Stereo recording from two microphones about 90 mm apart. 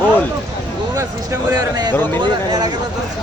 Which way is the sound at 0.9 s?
30° right (ahead or behind).